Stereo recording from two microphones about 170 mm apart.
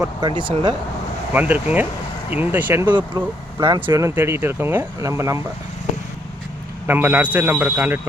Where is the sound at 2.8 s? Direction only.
25° right (ahead or behind).